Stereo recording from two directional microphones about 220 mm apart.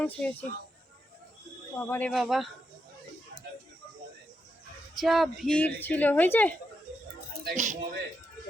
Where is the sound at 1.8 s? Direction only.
10° left (ahead or behind).